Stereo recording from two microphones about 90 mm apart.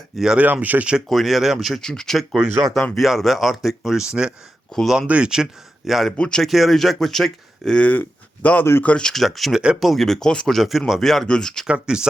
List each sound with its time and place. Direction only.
0.2 s speech: 5° right (ahead or behind)
0.4 s speech: 20° right (ahead or behind)
1.0 s speech: centre (ahead or behind)
4.7 s speech: 5° left (ahead or behind)
4.9 s speech: 10° right (ahead or behind)
9.6 s speech: 10° right (ahead or behind)
9.9 s speech: 5° left (ahead or behind)
11.6 s speech: 10° right (ahead or behind)